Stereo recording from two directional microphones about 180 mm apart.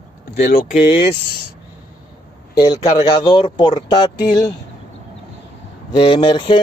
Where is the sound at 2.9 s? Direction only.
30° left (ahead or behind).